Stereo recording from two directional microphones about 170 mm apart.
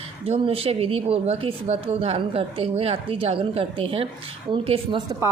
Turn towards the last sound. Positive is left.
turn(degrees=-25)  # may be behind; listen again after turning